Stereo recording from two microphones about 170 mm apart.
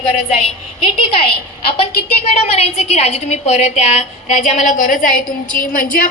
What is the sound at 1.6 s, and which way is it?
A woman's voice, 35° left (ahead or behind).